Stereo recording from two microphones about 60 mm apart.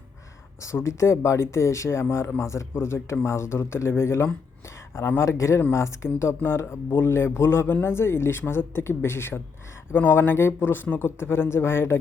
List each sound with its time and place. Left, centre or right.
0.6 s a man's voice: left
6.1 s a man's voice: left
11.2 s a man's voice: left